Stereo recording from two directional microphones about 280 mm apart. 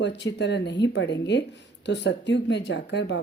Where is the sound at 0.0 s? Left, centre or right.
Left.